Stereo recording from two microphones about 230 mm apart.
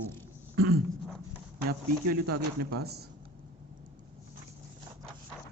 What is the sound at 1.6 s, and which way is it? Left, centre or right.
Speech, right.